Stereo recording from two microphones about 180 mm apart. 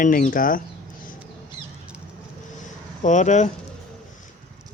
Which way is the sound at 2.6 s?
45° left (ahead or behind).